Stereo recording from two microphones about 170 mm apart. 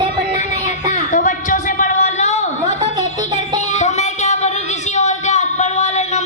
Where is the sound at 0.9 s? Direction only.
45° left (ahead or behind).